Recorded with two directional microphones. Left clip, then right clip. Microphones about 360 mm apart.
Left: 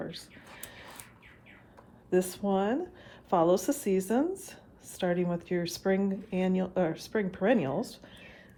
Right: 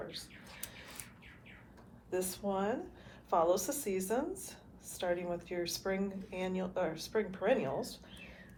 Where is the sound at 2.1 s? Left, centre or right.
Left.